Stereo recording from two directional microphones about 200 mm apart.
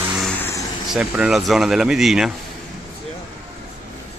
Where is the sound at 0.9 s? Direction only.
5° right (ahead or behind).